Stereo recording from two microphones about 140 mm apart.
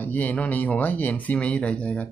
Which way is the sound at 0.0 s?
15° left (ahead or behind).